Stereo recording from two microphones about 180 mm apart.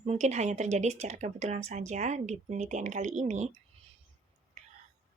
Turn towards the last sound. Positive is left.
turn(degrees=-40)  # may be behind; listen again after turning